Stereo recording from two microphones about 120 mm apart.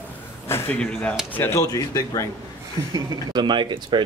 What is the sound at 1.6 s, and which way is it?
Speech, 30° left (ahead or behind).